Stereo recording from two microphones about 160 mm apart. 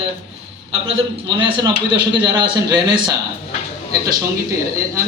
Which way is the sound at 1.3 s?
30° right (ahead or behind).